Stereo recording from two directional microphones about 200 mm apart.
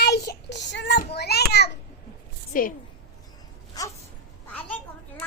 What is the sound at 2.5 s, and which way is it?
Speech, 45° left (ahead or behind).